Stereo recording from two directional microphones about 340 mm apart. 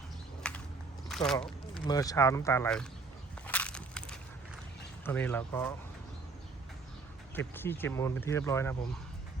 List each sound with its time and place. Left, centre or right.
0.4 s a sound: centre
1.0 s speech: centre
3.4 s crushing: centre
5.0 s speech: centre
7.3 s speech: centre